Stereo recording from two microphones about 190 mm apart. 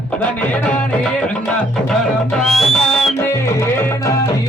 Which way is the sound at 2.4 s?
Centre (ahead or behind).